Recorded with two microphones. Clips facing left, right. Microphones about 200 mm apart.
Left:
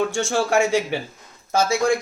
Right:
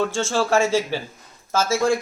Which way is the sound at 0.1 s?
15° left (ahead or behind).